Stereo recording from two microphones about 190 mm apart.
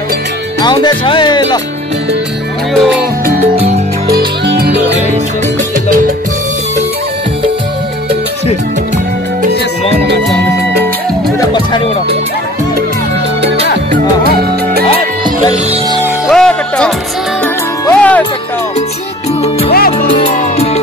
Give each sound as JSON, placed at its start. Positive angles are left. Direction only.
{"t": 0.6, "sound": "speech", "side_deg": 20}
{"t": 2.7, "sound": "speech", "side_deg": 0}
{"t": 4.1, "sound": "music", "side_deg": -60}
{"t": 11.3, "sound": "music", "side_deg": 20}
{"t": 13.9, "sound": "music", "side_deg": -55}
{"t": 15.5, "sound": "music", "side_deg": -30}
{"t": 16.3, "sound": "music", "side_deg": 5}
{"t": 19.7, "sound": "music", "side_deg": 50}
{"t": 20.2, "sound": "music", "side_deg": 30}